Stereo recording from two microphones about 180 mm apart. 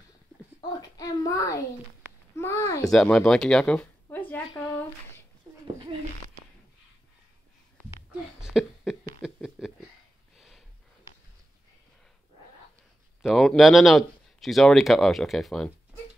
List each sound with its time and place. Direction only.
0.6 s a child's voice: 20° left (ahead or behind)
2.9 s speech: 5° left (ahead or behind)
4.5 s a sound: 25° left (ahead or behind)
8.4 s a sound: centre (ahead or behind)
10.3 s snort: centre (ahead or behind)
13.2 s speech: centre (ahead or behind)